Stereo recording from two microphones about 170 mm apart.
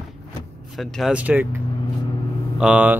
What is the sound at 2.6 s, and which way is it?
Speech, 5° right (ahead or behind).